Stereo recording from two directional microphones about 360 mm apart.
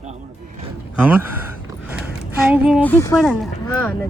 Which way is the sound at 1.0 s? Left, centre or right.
Centre.